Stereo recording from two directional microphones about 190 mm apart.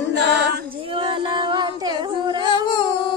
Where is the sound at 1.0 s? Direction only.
25° right (ahead or behind).